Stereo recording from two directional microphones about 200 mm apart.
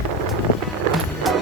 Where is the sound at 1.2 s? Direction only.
Centre (ahead or behind).